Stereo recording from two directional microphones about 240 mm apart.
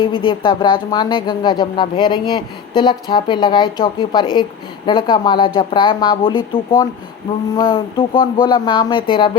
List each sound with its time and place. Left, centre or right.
0.0 s speech: left